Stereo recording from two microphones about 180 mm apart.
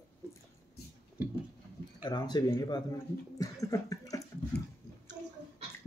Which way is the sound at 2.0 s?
25° left (ahead or behind).